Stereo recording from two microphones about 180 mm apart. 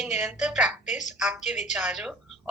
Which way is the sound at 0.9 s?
40° left (ahead or behind).